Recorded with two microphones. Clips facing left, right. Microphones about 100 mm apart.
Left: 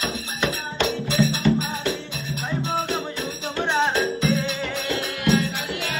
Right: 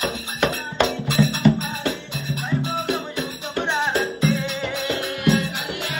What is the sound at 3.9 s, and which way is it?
Music, 15° right (ahead or behind).